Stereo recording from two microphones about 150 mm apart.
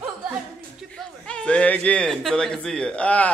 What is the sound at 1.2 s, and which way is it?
Speech, 5° left (ahead or behind).